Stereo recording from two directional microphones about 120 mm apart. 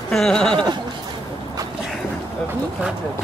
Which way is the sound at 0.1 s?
5° left (ahead or behind).